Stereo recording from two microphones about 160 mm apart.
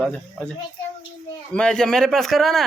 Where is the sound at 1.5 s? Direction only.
5° left (ahead or behind).